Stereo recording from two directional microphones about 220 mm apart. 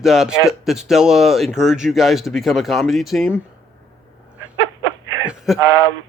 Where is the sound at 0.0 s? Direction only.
Centre (ahead or behind).